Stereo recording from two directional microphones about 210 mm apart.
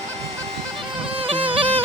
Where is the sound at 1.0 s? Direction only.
25° right (ahead or behind).